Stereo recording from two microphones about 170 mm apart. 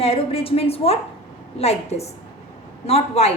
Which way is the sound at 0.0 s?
35° left (ahead or behind).